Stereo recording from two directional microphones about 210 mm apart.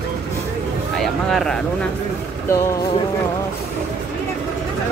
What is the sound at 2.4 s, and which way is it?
Speech, 15° left (ahead or behind).